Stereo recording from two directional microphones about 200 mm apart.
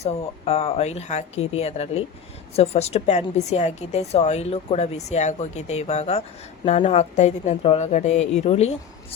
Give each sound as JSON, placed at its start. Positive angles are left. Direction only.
{"t": 0.0, "sound": "a woman's voice", "side_deg": 30}